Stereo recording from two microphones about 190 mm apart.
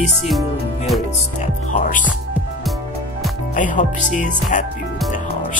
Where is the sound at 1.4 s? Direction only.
45° left (ahead or behind).